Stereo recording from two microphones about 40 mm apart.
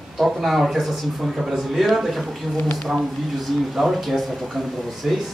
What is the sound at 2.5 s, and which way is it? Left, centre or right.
Speech, left.